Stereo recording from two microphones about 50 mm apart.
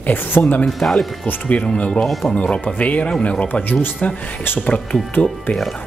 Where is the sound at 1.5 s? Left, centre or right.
Left.